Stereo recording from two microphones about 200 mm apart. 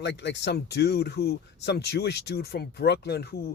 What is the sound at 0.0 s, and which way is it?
Speech, 60° left (ahead or behind).